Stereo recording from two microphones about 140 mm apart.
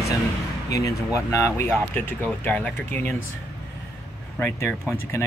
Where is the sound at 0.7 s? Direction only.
25° left (ahead or behind).